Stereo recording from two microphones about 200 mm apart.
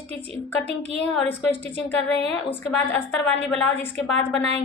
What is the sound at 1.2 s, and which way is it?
A woman's voice, 10° left (ahead or behind).